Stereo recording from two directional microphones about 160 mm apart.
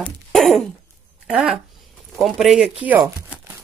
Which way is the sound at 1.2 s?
5° right (ahead or behind).